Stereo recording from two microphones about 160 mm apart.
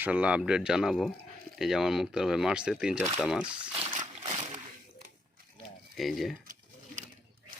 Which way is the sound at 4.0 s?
40° right (ahead or behind).